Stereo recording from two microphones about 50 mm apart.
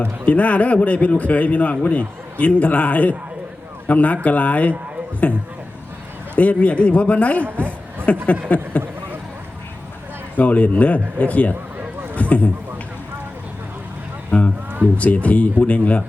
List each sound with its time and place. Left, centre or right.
0.0 s a man's voice: left
7.4 s a woman's voice: right
8.0 s a man's voice: left
10.3 s a man's voice: left
12.1 s a sound: left
14.3 s a man's voice: left